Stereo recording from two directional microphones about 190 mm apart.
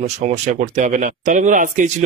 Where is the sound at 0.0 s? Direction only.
40° right (ahead or behind).